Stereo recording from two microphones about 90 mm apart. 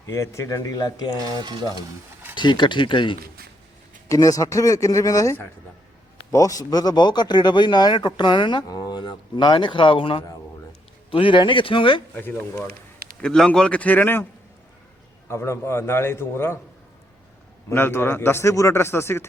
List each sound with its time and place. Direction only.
0.0 s speech: 35° left (ahead or behind)
1.2 s stir: 50° right (ahead or behind)
2.3 s a man's voice: 60° left (ahead or behind)
4.1 s a man's voice: 40° left (ahead or behind); by 10.2 s 80° left
11.1 s speech: 70° left (ahead or behind)
12.1 s a man's voice: 20° left (ahead or behind)
13.2 s a man's voice: 10° left (ahead or behind)
15.3 s a man's voice: 30° left (ahead or behind)
17.7 s a man's voice: 25° left (ahead or behind)